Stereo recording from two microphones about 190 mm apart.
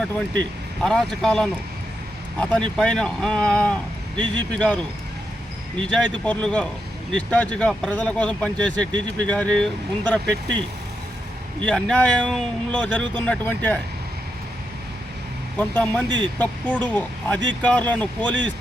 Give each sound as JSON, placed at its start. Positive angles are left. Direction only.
{"t": 0.9, "sound": "speech", "side_deg": 5}
{"t": 5.8, "sound": "speech", "side_deg": 5}
{"t": 11.6, "sound": "speech", "side_deg": 5}
{"t": 15.5, "sound": "speech", "side_deg": 10}
{"t": 16.0, "sound": "speech", "side_deg": -25}
{"t": 16.4, "sound": "speech", "side_deg": 10}